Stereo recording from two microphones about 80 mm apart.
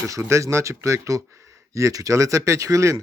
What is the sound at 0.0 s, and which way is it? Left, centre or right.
Speech, right.